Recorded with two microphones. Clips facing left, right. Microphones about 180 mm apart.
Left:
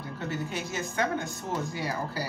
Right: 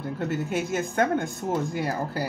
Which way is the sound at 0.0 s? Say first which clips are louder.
Right 5 dB; 50° right (ahead or behind).